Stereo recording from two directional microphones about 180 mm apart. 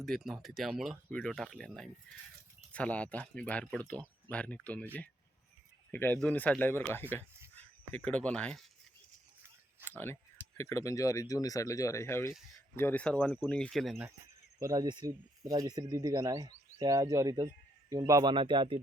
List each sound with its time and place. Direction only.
0.0 s speech: centre (ahead or behind)
5.9 s speech: 10° left (ahead or behind)
9.8 s a sound: 10° left (ahead or behind)
10.6 s speech: 15° left (ahead or behind)
14.6 s speech: 20° right (ahead or behind)